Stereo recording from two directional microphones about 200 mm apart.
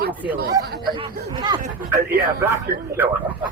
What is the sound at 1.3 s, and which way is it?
Speech, 20° right (ahead or behind).